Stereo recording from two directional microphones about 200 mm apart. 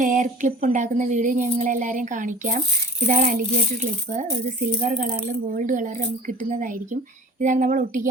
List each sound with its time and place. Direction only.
0.0 s speech: 40° right (ahead or behind)